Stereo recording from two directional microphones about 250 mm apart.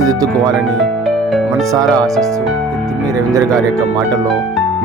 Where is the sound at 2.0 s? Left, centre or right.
Centre.